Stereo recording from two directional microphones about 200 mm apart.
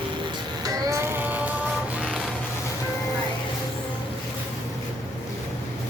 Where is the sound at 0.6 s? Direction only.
15° right (ahead or behind).